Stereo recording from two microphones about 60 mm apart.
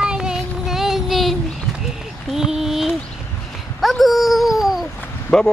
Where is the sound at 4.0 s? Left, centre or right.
Centre.